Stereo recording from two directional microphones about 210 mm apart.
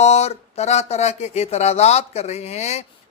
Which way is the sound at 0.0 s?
30° left (ahead or behind).